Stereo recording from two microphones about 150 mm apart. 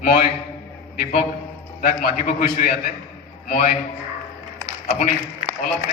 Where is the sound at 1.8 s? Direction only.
75° left (ahead or behind).